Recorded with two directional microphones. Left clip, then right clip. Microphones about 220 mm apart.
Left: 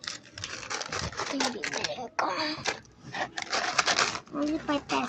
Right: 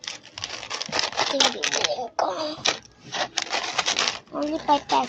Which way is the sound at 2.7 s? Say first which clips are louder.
Right 7 dB; 15° right (ahead or behind).